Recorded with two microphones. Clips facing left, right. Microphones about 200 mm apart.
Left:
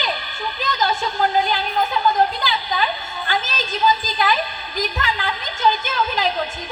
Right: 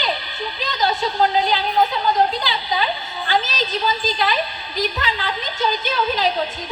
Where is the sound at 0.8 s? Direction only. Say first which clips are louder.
Right 3 dB; 50° left (ahead or behind).